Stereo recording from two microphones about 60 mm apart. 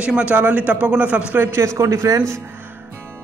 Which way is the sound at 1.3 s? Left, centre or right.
Right.